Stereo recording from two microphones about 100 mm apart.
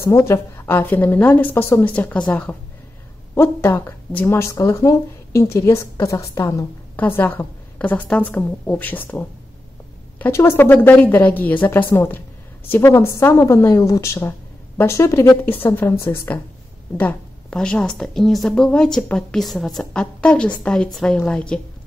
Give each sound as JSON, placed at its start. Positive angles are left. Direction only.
{"t": 0.0, "sound": "a woman's voice", "side_deg": 30}
{"t": 3.3, "sound": "a woman's voice", "side_deg": 25}
{"t": 7.0, "sound": "a woman's voice", "side_deg": 20}
{"t": 17.0, "sound": "a woman's voice", "side_deg": 10}